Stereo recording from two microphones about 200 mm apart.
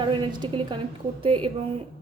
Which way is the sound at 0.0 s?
25° right (ahead or behind).